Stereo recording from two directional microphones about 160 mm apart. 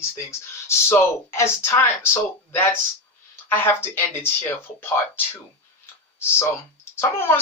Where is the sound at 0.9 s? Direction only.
15° left (ahead or behind).